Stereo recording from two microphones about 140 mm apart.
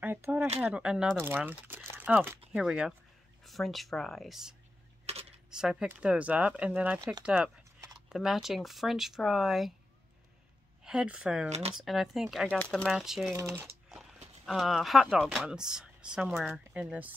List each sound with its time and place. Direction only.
0.0 s a sound: 15° right (ahead or behind)
0.6 s speech: 5° right (ahead or behind)
2.5 s speech: 5° right (ahead or behind)
5.1 s camera: 50° right (ahead or behind)
5.5 s speech: 5° right (ahead or behind)
10.8 s speech: 5° right (ahead or behind)
11.4 s speech: 50° right (ahead or behind)
11.7 s speech: centre (ahead or behind)
14.4 s speech: centre (ahead or behind)